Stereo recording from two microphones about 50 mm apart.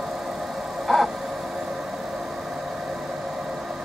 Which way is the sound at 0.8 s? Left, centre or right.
Centre.